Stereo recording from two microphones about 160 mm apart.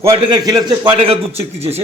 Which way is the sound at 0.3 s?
25° right (ahead or behind).